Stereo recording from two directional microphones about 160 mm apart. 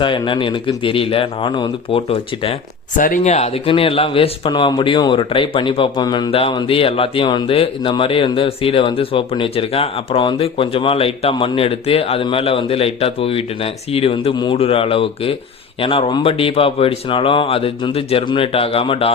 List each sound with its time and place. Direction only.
0.0 s speech: 30° left (ahead or behind)
3.0 s speech: 50° left (ahead or behind); by 19.1 s 35° left (ahead or behind)